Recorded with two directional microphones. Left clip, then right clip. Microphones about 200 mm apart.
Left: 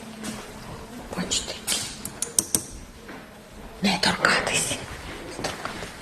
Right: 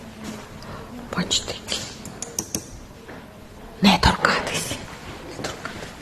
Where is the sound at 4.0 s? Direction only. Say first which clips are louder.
Right 2 dB; 15° right (ahead or behind).